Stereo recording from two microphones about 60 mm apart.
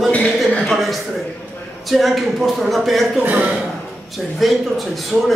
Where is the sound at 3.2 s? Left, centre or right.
Right.